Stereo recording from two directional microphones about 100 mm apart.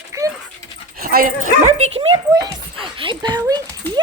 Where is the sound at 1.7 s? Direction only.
85° right.